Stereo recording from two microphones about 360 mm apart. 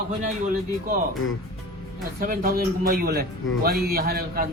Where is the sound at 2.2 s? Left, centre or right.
Right.